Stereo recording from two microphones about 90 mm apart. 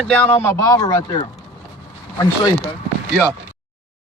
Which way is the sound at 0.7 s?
45° left (ahead or behind).